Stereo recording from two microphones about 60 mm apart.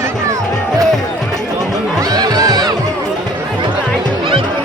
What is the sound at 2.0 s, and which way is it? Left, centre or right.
Music, right.